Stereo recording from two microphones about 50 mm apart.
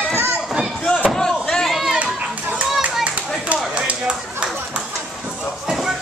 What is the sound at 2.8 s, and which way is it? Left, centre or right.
Clapping, right.